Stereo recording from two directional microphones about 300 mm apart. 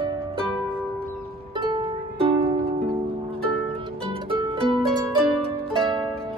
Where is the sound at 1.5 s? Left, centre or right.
Centre.